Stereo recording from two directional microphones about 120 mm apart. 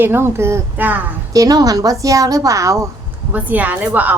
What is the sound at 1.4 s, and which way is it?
A woman's voice, 30° right (ahead or behind).